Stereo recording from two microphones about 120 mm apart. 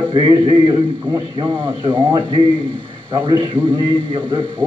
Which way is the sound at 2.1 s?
45° right (ahead or behind).